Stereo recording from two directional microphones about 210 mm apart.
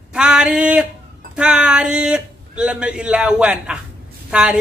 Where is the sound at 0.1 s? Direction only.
5° right (ahead or behind).